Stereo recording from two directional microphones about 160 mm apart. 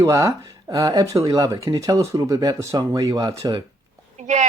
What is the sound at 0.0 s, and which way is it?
Speech, 20° right (ahead or behind).